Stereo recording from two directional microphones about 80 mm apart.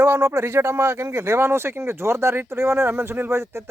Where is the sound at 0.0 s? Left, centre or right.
Right.